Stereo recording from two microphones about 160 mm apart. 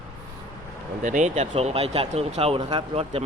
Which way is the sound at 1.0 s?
50° right (ahead or behind).